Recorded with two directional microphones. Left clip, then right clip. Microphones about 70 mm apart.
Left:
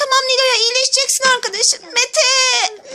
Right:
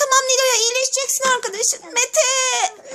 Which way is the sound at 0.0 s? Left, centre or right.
Centre.